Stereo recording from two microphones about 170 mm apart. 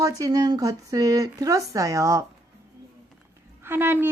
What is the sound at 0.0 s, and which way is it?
Speech, 20° right (ahead or behind).